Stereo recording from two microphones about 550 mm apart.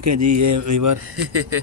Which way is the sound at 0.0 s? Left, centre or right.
Right.